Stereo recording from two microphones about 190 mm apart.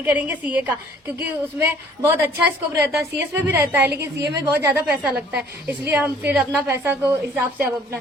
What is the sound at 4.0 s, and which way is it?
Speech, 60° right (ahead or behind).